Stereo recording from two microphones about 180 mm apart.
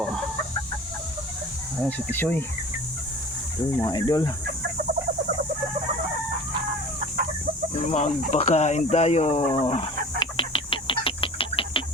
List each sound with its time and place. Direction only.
1.8 s speech: 10° left (ahead or behind)
3.8 s speech: 25° left (ahead or behind)
7.9 s speech: 40° left (ahead or behind)
10.2 s a sound: 30° left (ahead or behind)